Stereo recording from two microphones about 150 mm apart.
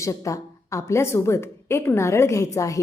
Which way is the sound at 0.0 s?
20° left (ahead or behind).